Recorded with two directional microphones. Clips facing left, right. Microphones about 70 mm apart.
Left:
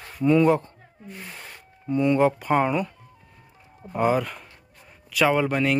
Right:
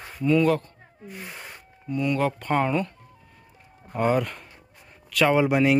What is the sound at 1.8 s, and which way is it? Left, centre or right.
Speech, left.